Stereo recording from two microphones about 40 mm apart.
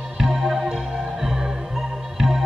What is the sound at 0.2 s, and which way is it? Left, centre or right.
Music, centre.